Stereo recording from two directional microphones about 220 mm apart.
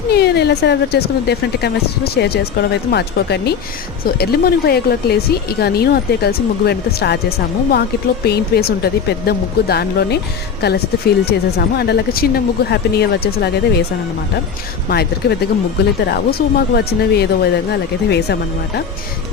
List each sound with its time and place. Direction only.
0.1 s speech: 45° left (ahead or behind)
14.8 s speech: 45° left (ahead or behind)